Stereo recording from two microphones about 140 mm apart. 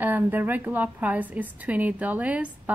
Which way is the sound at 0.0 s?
15° right (ahead or behind).